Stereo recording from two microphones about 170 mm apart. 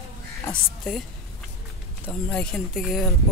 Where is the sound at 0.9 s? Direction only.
5° left (ahead or behind).